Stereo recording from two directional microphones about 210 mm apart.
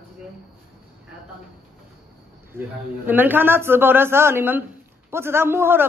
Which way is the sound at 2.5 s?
10° right (ahead or behind).